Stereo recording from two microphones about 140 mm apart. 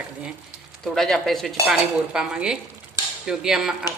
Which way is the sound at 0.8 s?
Centre (ahead or behind).